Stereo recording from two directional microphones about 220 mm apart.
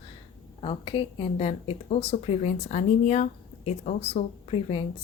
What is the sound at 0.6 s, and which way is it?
A woman's voice, 25° left (ahead or behind).